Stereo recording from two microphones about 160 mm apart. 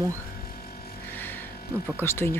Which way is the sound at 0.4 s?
65° left (ahead or behind).